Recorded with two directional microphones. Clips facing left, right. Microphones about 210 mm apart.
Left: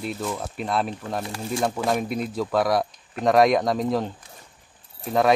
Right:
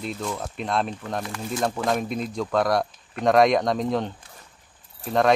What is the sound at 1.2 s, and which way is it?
Speech, 30° left (ahead or behind).